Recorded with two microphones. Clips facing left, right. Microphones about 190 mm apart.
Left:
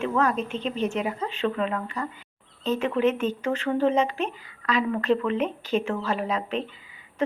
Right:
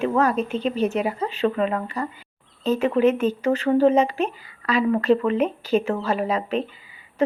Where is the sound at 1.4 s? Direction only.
40° right (ahead or behind).